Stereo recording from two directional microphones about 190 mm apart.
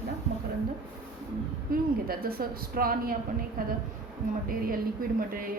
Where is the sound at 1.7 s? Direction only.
50° right (ahead or behind).